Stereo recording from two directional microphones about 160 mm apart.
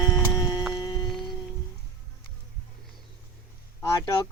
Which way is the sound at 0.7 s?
25° left (ahead or behind).